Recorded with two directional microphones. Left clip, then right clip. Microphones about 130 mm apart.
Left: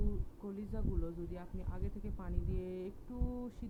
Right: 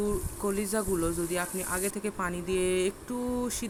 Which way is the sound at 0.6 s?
30° right (ahead or behind).